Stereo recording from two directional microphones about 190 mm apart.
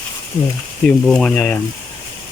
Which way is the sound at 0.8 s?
5° left (ahead or behind).